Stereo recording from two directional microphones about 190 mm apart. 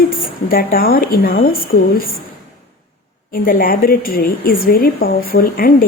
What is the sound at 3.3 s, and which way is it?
A woman's voice, 50° left (ahead or behind).